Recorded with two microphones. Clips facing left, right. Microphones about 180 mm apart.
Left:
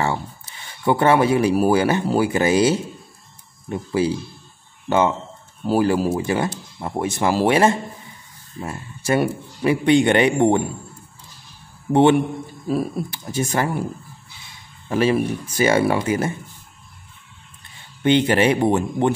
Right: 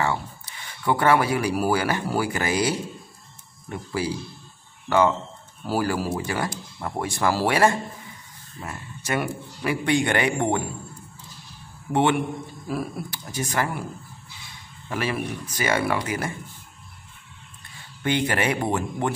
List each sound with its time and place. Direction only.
0.0 s speech: 25° left (ahead or behind)
11.9 s speech: 30° left (ahead or behind)
14.9 s speech: 30° left (ahead or behind)
18.0 s speech: 25° left (ahead or behind)